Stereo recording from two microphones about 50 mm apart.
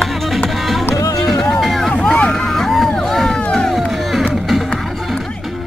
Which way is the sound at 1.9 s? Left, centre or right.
Centre.